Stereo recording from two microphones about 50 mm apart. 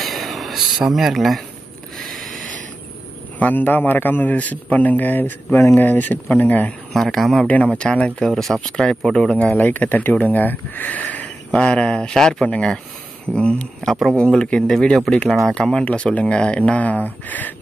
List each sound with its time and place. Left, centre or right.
0.0 s a sound: centre
0.8 s speech: centre
2.0 s a sound: centre
3.3 s a man's voice: left
6.9 s speech: centre
7.4 s speech: left
8.3 s speech: centre
8.5 s speech: centre
9.6 s a man's voice: left
11.5 s speech: left
13.8 s speech: centre
14.3 s speech: centre; by 17.6 s left